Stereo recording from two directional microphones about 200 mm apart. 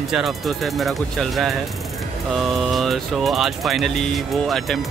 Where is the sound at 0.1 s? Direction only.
Centre (ahead or behind).